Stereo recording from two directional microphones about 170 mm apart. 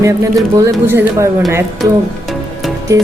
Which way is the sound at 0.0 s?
20° right (ahead or behind).